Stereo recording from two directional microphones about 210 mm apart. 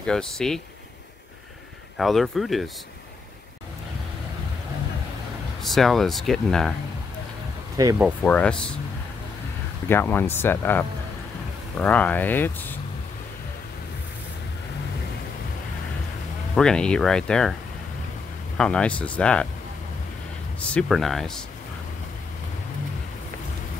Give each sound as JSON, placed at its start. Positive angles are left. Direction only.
{"t": 0.0, "sound": "speech", "side_deg": 5}
{"t": 2.0, "sound": "speech", "side_deg": 0}
{"t": 5.6, "sound": "speech", "side_deg": 0}
{"t": 7.7, "sound": "speech", "side_deg": -15}
{"t": 8.2, "sound": "speech", "side_deg": 5}
{"t": 9.8, "sound": "speech", "side_deg": 10}
{"t": 16.5, "sound": "speech", "side_deg": 5}
{"t": 18.6, "sound": "speech", "side_deg": 5}
{"t": 20.7, "sound": "speech", "side_deg": 0}